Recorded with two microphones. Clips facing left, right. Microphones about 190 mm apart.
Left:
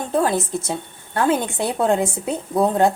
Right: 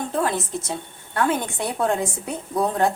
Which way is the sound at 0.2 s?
30° left (ahead or behind).